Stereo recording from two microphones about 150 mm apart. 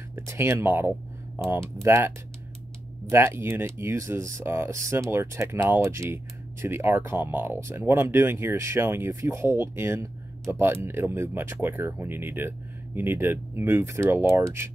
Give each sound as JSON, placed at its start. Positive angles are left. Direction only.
{"t": 0.1, "sound": "speech", "side_deg": -15}